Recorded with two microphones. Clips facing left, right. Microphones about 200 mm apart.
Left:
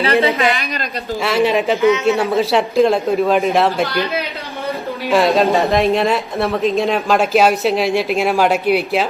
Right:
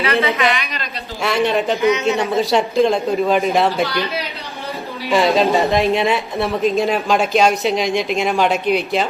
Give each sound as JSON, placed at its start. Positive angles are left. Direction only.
{"t": 0.0, "sound": "a woman's voice", "side_deg": 30}
{"t": 1.2, "sound": "speech", "side_deg": 0}
{"t": 5.1, "sound": "speech", "side_deg": 0}